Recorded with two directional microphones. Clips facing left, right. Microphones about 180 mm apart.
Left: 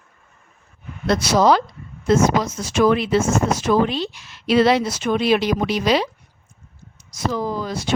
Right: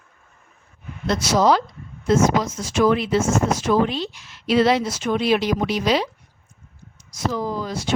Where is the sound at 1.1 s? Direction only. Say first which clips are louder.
Left 2 dB; 65° left (ahead or behind).